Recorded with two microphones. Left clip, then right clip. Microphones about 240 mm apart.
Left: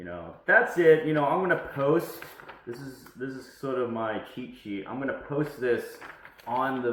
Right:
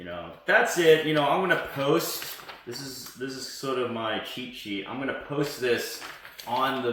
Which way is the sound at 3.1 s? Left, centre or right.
Right.